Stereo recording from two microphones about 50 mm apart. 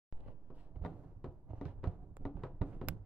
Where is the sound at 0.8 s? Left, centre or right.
Right.